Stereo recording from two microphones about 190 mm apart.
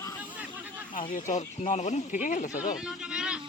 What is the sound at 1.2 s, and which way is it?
Speech, 40° left (ahead or behind).